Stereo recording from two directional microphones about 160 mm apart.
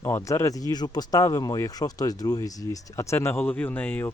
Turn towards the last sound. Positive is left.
turn(degrees=10)  # may be behind; listen again after turning